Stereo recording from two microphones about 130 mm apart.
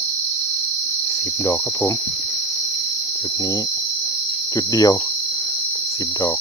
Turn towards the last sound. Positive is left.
turn(degrees=25)  # may be behind; listen again after turning